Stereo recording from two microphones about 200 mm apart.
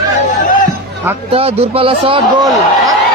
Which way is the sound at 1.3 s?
30° right (ahead or behind).